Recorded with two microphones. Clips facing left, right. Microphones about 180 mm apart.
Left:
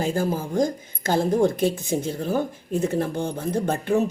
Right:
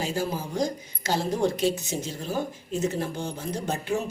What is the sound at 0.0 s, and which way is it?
Speech, 50° left (ahead or behind).